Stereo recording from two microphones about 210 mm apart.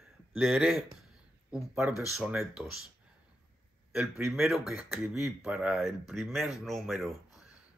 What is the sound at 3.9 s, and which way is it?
Speech, centre (ahead or behind).